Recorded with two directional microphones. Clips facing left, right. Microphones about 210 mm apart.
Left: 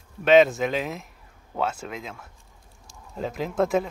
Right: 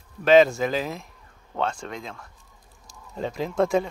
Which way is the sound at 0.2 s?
Centre (ahead or behind).